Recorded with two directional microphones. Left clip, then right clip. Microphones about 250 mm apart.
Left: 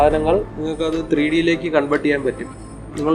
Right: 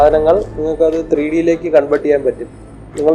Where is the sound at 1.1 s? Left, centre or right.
Left.